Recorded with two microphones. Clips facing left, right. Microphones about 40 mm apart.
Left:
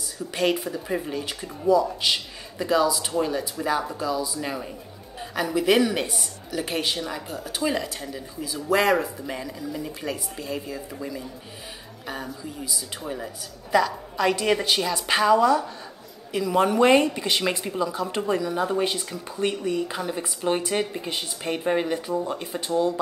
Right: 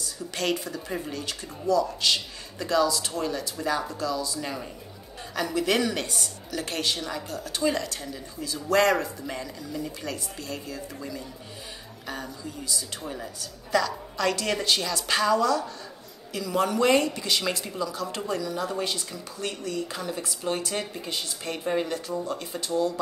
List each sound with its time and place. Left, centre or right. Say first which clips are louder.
0.0 s speech: left 5 dB; centre